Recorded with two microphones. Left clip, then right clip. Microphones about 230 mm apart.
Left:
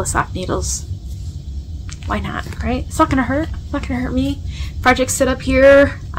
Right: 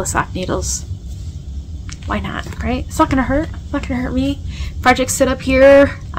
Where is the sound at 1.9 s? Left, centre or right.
Centre.